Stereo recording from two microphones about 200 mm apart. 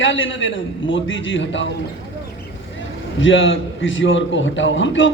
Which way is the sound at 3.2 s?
70° left (ahead or behind).